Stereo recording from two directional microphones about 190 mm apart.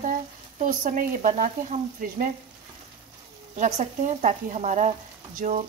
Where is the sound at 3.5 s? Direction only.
40° right (ahead or behind).